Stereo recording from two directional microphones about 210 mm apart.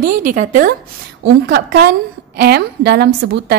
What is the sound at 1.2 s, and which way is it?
A woman's voice, 55° right (ahead or behind).